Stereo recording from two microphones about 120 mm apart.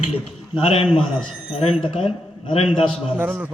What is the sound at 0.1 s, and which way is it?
A man's voice, 55° left (ahead or behind).